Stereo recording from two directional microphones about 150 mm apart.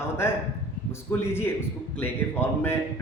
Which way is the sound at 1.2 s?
15° left (ahead or behind).